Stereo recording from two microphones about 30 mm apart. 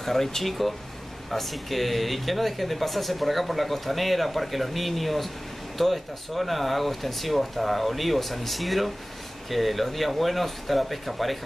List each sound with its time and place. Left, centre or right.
0.0 s speech: centre